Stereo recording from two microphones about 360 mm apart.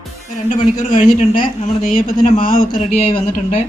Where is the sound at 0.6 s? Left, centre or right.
Centre.